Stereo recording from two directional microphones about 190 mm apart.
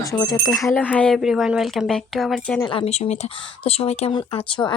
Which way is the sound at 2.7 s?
30° left (ahead or behind).